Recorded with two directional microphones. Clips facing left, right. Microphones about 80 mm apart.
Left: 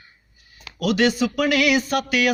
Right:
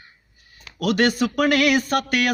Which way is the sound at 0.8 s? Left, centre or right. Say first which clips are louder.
Even; right.